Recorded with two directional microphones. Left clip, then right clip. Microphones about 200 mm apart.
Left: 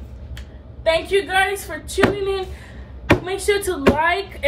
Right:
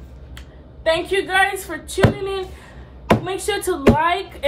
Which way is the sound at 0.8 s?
20° right (ahead or behind).